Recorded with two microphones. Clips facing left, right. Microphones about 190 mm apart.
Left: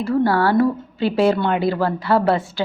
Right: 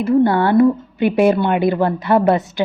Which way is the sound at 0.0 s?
20° right (ahead or behind).